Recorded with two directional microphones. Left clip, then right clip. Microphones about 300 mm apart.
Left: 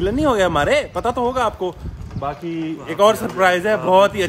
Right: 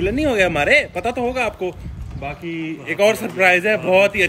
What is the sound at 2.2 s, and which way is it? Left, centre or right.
Speech, left.